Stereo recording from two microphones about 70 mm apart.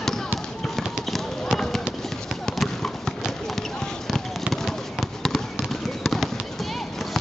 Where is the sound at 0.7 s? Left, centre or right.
Centre.